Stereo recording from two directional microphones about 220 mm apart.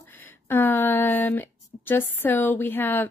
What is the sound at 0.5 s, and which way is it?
A woman's voice, 10° left (ahead or behind).